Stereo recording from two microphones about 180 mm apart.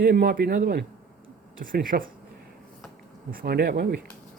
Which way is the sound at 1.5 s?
50° right (ahead or behind).